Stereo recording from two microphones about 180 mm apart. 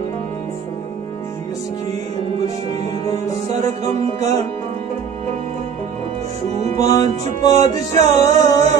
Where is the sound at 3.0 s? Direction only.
15° left (ahead or behind).